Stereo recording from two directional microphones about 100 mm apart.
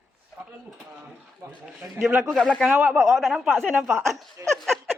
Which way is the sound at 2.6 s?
15° right (ahead or behind).